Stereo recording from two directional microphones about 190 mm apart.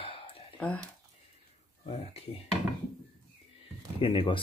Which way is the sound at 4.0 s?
25° left (ahead or behind).